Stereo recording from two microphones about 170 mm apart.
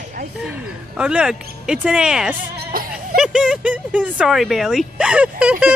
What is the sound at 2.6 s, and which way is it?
Music, 60° right (ahead or behind).